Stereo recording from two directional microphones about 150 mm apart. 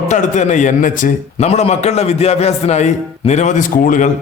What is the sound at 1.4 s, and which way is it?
Speech, 45° left (ahead or behind).